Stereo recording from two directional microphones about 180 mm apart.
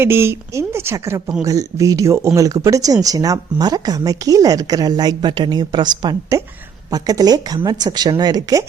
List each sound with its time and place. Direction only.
0.0 s a woman's voice: 15° right (ahead or behind)